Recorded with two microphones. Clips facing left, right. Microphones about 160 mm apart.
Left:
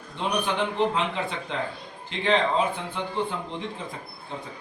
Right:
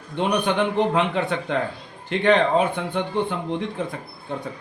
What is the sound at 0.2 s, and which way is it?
A man's voice, 60° right (ahead or behind).